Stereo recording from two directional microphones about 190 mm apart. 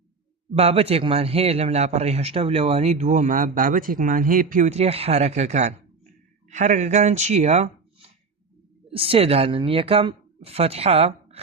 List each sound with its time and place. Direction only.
0.5 s a man's voice: 30° right (ahead or behind)
8.9 s a man's voice: 30° right (ahead or behind)